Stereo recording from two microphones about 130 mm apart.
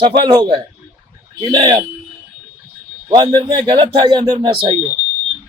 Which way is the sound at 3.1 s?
35° right (ahead or behind).